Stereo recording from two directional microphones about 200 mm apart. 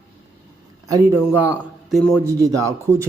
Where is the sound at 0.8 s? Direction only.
15° right (ahead or behind).